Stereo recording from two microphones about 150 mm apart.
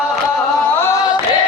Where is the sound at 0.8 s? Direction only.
20° left (ahead or behind).